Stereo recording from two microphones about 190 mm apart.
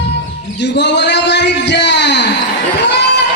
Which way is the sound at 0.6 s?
65° left (ahead or behind).